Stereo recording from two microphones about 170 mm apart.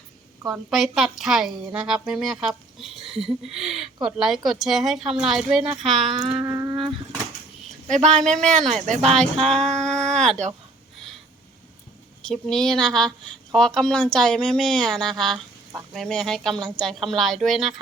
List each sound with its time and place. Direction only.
0.5 s a woman's voice: centre (ahead or behind)
6.3 s music: 20° right (ahead or behind)
8.2 s a woman's voice: 5° left (ahead or behind)
8.9 s speech: 40° right (ahead or behind)
9.5 s a woman's voice: 5° left (ahead or behind)
9.8 s a sound: 5° left (ahead or behind)
12.2 s a woman's voice: 5° left (ahead or behind)